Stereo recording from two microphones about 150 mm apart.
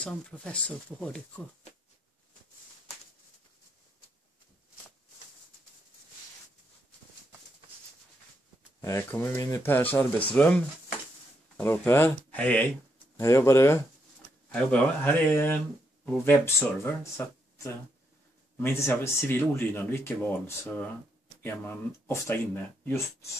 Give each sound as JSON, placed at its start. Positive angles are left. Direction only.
{"t": 0.0, "sound": "speech", "side_deg": 10}
{"t": 8.8, "sound": "speech", "side_deg": 15}